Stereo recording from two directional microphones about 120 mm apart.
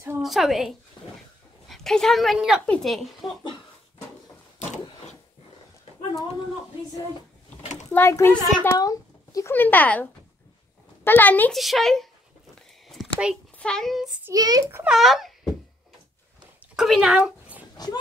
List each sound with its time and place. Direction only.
0.2 s a sound: centre (ahead or behind)
1.7 s speech: 5° left (ahead or behind)
2.6 s speech: 5° left (ahead or behind)
7.9 s a child's voice: 20° left (ahead or behind)
9.5 s speech: 15° left (ahead or behind)
11.1 s speech: 15° left (ahead or behind)
11.5 s speech: centre (ahead or behind)
12.8 s a sound: centre (ahead or behind)
13.6 s speech: 5° left (ahead or behind)
14.3 s a child's voice: 35° right (ahead or behind)
14.9 s speech: centre (ahead or behind)
16.7 s a sound: centre (ahead or behind)